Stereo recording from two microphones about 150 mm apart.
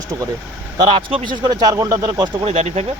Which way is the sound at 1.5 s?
25° right (ahead or behind).